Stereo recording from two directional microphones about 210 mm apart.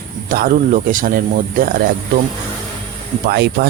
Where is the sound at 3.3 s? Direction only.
50° right (ahead or behind).